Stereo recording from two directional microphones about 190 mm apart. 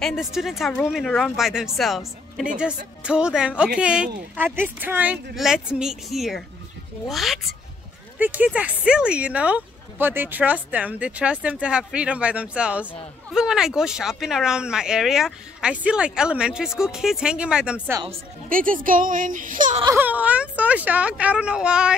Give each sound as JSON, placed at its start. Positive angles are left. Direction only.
{"t": 0.0, "sound": "speech", "side_deg": 0}
{"t": 18.5, "sound": "speech", "side_deg": -45}
{"t": 20.0, "sound": "speech", "side_deg": -10}